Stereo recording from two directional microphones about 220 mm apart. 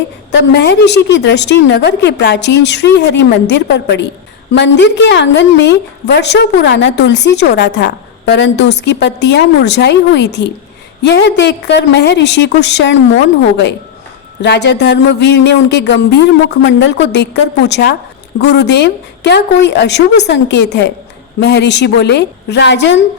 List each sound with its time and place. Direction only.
0.3 s a woman's voice: 50° left (ahead or behind)